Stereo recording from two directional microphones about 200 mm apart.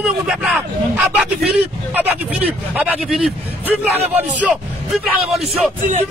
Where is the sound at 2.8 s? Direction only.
5° right (ahead or behind).